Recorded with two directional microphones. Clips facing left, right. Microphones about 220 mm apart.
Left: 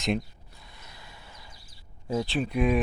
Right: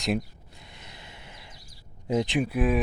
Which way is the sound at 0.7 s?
25° right (ahead or behind).